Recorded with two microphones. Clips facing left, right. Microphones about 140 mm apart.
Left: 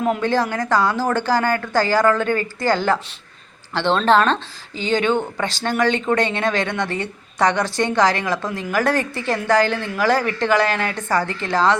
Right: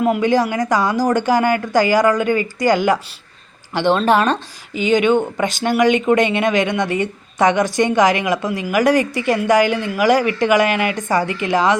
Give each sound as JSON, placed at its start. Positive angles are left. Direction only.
{"t": 0.0, "sound": "speech", "side_deg": -10}